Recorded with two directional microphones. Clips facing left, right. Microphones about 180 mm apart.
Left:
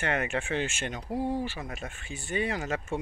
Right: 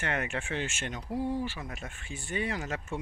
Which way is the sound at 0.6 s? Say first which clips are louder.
Left 3 dB; 20° left (ahead or behind).